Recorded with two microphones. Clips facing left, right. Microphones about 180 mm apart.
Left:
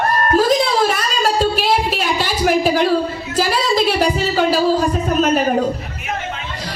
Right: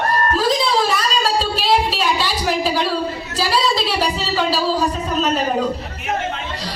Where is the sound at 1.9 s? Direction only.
50° left (ahead or behind).